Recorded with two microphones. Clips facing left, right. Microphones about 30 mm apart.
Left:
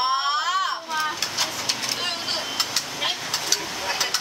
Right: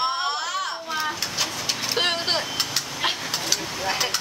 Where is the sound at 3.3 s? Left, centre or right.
Centre.